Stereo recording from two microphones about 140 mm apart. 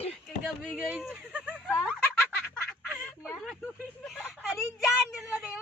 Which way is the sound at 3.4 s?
Centre (ahead or behind).